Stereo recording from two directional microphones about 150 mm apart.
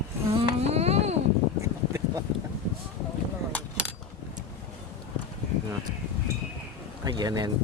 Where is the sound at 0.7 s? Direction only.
45° right (ahead or behind).